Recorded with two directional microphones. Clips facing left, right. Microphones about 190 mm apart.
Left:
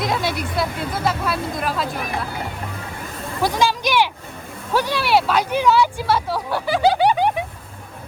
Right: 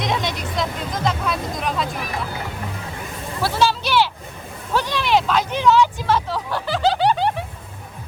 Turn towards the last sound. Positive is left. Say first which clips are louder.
# left 2 dB
turn(degrees=10)  # may be behind; listen again after turning